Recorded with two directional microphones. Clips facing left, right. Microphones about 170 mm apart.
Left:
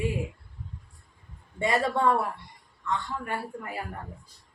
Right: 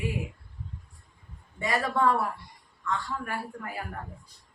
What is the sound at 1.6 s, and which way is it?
Speech, 25° left (ahead or behind).